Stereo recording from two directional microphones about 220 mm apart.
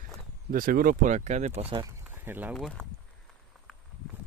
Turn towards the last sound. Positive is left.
turn(degrees=5)  # may be behind; listen again after turning